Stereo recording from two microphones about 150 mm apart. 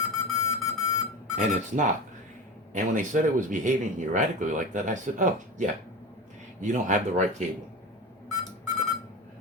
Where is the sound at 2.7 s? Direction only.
55° right (ahead or behind).